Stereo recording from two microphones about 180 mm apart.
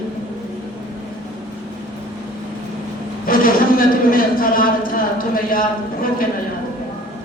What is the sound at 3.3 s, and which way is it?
Speech, 50° left (ahead or behind).